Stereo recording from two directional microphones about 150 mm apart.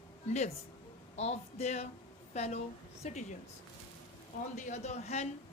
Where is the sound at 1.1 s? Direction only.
45° left (ahead or behind).